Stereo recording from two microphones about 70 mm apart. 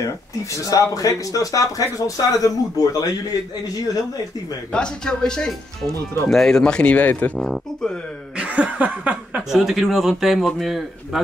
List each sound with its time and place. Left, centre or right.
0.7 s speech: left
4.7 s speech: centre
7.3 s speech: centre
8.4 s chuckle: centre
9.5 s speech: centre